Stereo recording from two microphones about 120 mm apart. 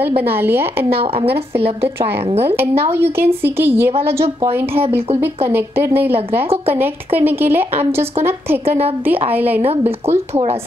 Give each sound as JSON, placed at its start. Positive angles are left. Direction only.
{"t": 0.0, "sound": "a woman's voice", "side_deg": -20}
{"t": 2.4, "sound": "a woman's voice", "side_deg": -20}
{"t": 9.6, "sound": "a woman's voice", "side_deg": -55}